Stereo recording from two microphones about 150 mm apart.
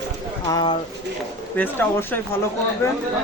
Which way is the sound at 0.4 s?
30° left (ahead or behind).